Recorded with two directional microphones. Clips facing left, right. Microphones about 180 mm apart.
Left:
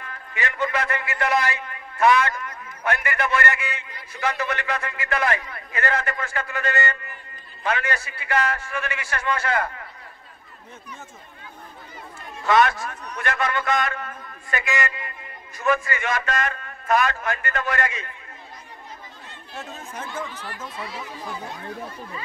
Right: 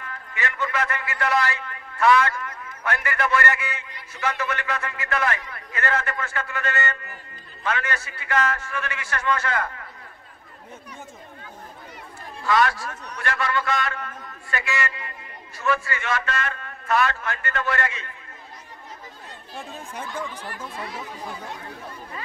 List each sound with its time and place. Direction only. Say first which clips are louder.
0.3 s a man's voice: left 3 dB; 20° left (ahead or behind)
4.2 s speech: left 1 dB; 35° left (ahead or behind)
4.8 s a man's voice: left 1 dB; 15° left (ahead or behind)
12.4 s a man's voice: left 2 dB; 20° left (ahead or behind)
19.9 s speech: even; 10° right (ahead or behind)
20.3 s speech: even; 50° right (ahead or behind)